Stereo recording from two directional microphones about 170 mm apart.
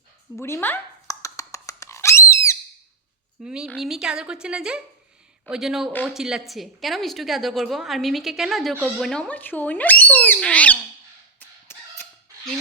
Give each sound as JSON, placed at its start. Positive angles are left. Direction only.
{"t": 0.3, "sound": "a sound", "side_deg": 15}
{"t": 3.4, "sound": "a woman's voice", "side_deg": -5}
{"t": 11.3, "sound": "chicken", "side_deg": 15}